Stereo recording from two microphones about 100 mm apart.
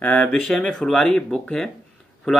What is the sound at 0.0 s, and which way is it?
Speech, 10° left (ahead or behind).